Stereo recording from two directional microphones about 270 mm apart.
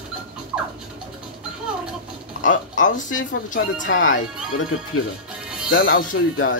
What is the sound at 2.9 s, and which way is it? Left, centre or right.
Speech, left.